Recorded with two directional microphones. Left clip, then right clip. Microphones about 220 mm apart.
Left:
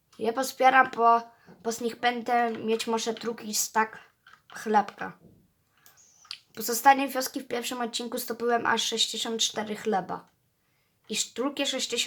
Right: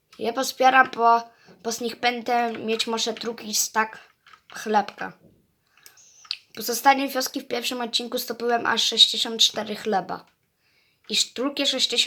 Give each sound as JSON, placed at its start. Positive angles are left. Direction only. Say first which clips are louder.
{"t": 0.2, "sound": "speech", "louder": "right 3 dB", "side_deg": 0}
{"t": 6.1, "sound": "speech", "louder": "right 7 dB", "side_deg": 0}